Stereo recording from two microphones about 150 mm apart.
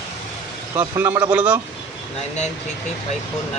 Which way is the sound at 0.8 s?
15° right (ahead or behind).